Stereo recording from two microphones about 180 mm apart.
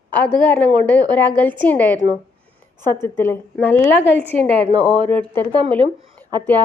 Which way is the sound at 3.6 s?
10° left (ahead or behind).